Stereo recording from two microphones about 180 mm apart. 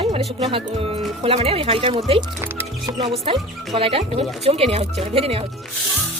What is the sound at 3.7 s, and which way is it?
Speech, 30° right (ahead or behind).